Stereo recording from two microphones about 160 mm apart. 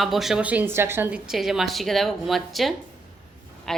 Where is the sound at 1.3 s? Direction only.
Centre (ahead or behind).